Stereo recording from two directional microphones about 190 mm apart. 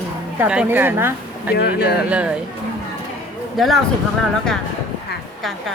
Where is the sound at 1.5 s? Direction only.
55° left (ahead or behind).